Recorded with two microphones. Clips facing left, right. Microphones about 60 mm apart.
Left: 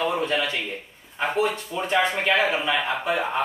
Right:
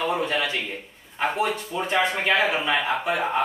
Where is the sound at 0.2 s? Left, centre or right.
Right.